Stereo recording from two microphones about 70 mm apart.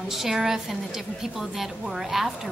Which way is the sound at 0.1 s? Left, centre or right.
Centre.